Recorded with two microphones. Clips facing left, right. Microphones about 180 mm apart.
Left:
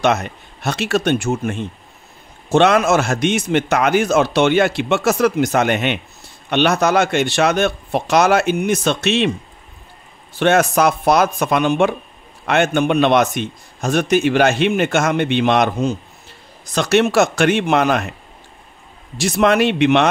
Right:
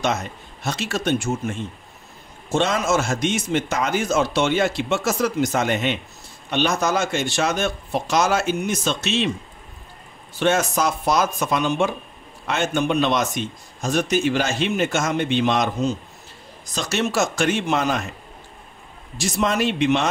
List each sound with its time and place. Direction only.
0.0 s a man's voice: 65° left (ahead or behind)
10.4 s a man's voice: 65° left (ahead or behind)
19.1 s a man's voice: 65° left (ahead or behind)